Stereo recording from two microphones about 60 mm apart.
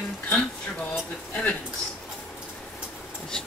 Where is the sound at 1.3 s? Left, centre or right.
Left.